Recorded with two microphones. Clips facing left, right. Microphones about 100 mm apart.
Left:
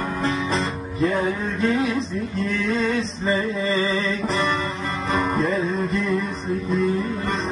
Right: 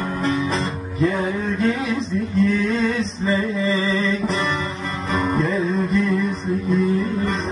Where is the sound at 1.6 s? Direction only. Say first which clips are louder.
Left 1 dB; 30° left (ahead or behind).